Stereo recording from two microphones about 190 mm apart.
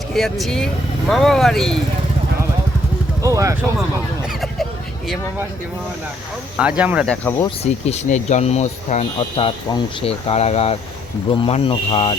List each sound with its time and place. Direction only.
0.1 s speech: centre (ahead or behind)
3.2 s speech: 15° right (ahead or behind)
6.6 s speech: 5° right (ahead or behind)
7.1 s speech: 10° left (ahead or behind)
7.4 s speech: 35° left (ahead or behind)